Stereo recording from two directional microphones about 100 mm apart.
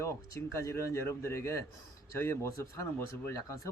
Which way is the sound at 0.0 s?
30° left (ahead or behind).